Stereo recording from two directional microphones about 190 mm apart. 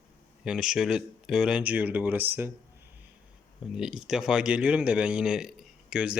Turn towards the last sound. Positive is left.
turn(degrees=-5)  # may be behind; listen again after turning